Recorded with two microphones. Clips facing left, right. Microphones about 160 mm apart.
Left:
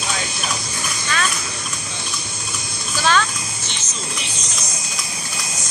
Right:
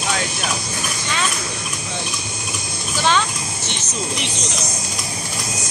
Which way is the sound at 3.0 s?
20° right (ahead or behind).